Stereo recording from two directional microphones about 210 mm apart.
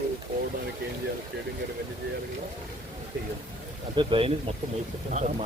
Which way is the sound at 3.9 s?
25° right (ahead or behind).